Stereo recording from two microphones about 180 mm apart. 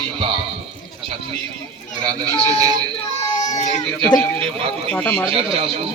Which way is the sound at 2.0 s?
20° right (ahead or behind).